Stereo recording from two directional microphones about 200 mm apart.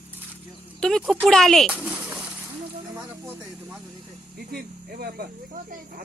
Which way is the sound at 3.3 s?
10° right (ahead or behind).